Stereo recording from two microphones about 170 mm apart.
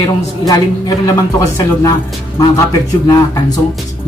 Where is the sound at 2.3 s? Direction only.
20° left (ahead or behind).